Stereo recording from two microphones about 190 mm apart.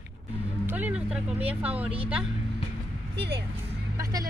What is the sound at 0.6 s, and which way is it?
Speech, 10° right (ahead or behind).